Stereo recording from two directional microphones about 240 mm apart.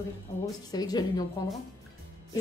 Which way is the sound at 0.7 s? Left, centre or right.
Centre.